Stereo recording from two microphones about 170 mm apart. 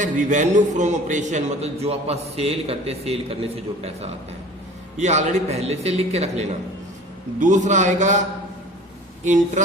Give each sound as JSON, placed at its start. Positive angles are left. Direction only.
{"t": 0.0, "sound": "a man's voice", "side_deg": -45}